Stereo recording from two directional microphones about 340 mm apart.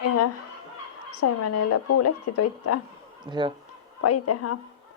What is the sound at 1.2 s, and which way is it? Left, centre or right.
A woman's voice, left.